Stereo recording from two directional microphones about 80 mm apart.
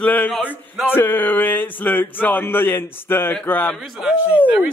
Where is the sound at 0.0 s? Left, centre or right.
Left.